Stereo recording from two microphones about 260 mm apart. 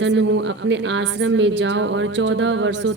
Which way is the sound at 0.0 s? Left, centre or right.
Right.